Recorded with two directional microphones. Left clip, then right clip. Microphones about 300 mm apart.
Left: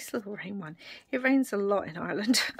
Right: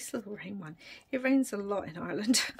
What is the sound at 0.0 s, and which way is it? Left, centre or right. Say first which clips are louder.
A woman's voice: left 4 dB; centre.